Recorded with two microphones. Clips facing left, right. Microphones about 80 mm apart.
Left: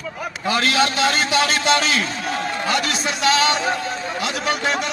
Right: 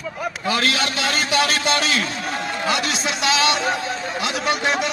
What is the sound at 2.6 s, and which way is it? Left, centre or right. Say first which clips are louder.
A man's voice: right 1 dB; centre.